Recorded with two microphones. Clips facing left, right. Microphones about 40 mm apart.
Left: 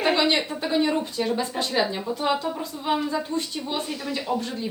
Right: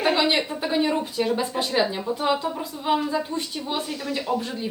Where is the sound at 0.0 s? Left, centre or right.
Centre.